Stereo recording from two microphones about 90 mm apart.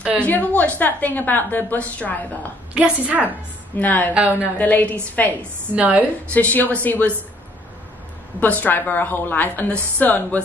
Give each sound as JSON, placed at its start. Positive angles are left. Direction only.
{"t": 0.2, "sound": "a woman's voice", "side_deg": 20}
{"t": 2.7, "sound": "a woman's voice", "side_deg": -15}
{"t": 3.8, "sound": "a woman's voice", "side_deg": 20}
{"t": 4.1, "sound": "a woman's voice", "side_deg": -15}
{"t": 4.6, "sound": "a woman's voice", "side_deg": 20}
{"t": 5.8, "sound": "a woman's voice", "side_deg": -15}
{"t": 6.3, "sound": "a woman's voice", "side_deg": 20}
{"t": 8.4, "sound": "a woman's voice", "side_deg": 20}